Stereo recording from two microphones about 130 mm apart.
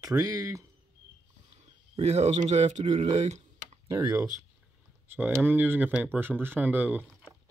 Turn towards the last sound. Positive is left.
turn(degrees=-15)  # may be behind; listen again after turning